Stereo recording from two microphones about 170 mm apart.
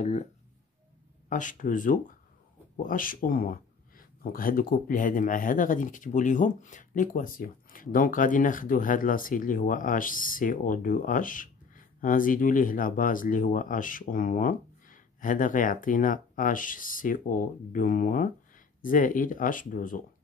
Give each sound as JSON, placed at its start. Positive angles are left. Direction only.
{"t": 0.0, "sound": "speech", "side_deg": 45}
{"t": 1.3, "sound": "speech", "side_deg": 50}